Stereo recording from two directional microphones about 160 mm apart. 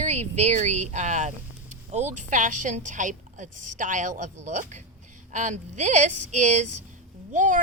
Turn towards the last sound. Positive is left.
turn(degrees=-50)  # may be behind; listen again after turning